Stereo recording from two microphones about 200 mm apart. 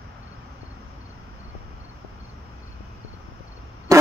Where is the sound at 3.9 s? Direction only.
15° right (ahead or behind).